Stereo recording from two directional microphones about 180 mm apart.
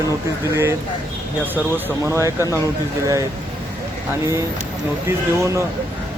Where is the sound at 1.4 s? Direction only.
10° right (ahead or behind).